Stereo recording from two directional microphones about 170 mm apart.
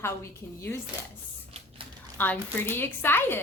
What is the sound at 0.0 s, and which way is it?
Speech, 15° left (ahead or behind).